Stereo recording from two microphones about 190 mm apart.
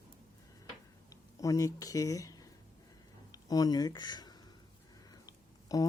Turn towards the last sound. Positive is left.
turn(degrees=20)  # may be behind; listen again after turning